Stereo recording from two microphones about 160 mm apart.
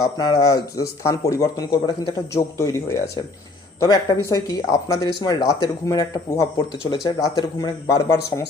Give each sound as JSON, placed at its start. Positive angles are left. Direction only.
{"t": 0.0, "sound": "speech", "side_deg": 25}